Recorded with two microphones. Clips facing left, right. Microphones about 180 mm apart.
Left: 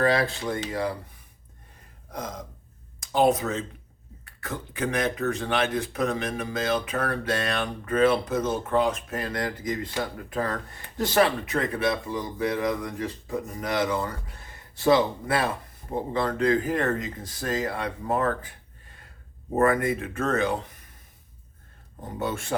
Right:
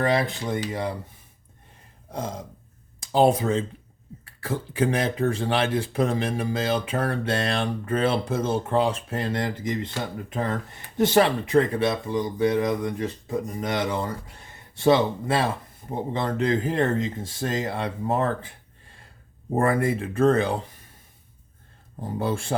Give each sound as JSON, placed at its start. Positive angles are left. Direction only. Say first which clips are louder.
{"t": 0.0, "sound": "speech", "louder": "even", "side_deg": -20}
{"t": 2.1, "sound": "speech", "louder": "right 3 dB", "side_deg": -30}
{"t": 22.2, "sound": "speech", "louder": "right 2 dB", "side_deg": -30}